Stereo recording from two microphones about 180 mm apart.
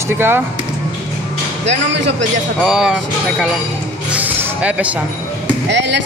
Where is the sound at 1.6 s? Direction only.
80° right.